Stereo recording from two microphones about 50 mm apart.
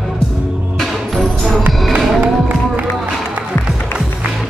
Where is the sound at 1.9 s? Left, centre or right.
Right.